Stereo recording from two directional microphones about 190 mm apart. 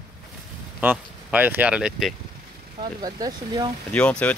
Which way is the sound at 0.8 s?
10° right (ahead or behind).